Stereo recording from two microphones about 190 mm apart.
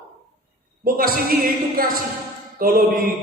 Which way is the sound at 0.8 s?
50° right (ahead or behind).